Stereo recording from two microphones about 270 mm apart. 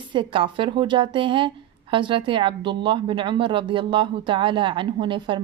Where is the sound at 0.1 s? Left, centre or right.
Centre.